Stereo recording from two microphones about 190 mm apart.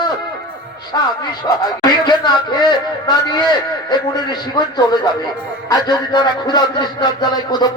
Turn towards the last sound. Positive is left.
turn(degrees=20)  # may be behind; listen again after turning